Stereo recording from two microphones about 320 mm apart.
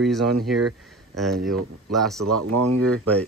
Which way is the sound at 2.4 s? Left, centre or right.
Right.